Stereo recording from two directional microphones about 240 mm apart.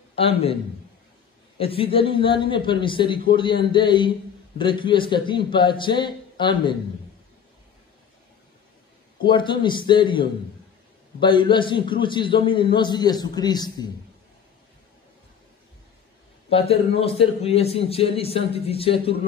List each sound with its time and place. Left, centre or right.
0.1 s a man's voice: left
1.6 s a man's voice: left
9.2 s a man's voice: centre
16.4 s a man's voice: left